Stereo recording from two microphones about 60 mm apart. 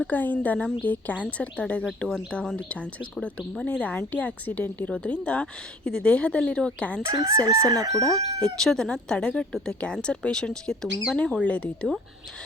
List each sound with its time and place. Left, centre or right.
0.1 s speech: left
2.0 s speech: centre
7.0 s chicken: right
7.7 s crowing: right
8.0 s speech: centre